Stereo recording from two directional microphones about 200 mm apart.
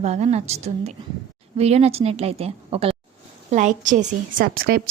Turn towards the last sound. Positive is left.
turn(degrees=-45)  # may be behind; listen again after turning